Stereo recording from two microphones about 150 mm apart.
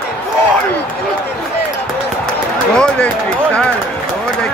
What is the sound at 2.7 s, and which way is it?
Run, 5° left (ahead or behind).